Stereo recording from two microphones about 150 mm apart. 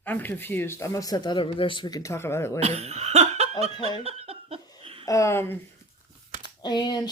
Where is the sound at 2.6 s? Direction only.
45° right (ahead or behind).